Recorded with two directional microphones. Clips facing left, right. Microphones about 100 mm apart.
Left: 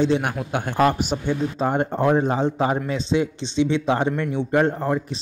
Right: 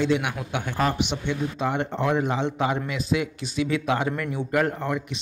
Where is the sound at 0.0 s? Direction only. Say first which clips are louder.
Left 3 dB; 35° left (ahead or behind).